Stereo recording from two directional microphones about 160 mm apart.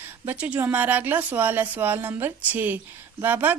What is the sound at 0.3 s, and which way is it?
Speech, 10° right (ahead or behind).